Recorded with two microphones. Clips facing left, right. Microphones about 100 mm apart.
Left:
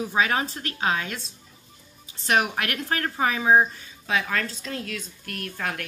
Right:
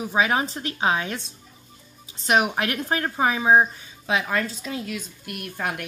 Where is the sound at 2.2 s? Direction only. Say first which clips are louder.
Right 2 dB; 20° right (ahead or behind).